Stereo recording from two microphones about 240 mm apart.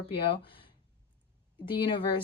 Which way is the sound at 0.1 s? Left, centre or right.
Left.